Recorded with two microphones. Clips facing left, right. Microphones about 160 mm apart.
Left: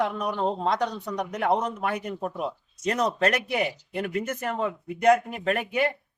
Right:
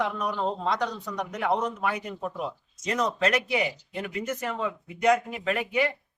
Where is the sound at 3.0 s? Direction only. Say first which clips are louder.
Left 1 dB; 35° left (ahead or behind).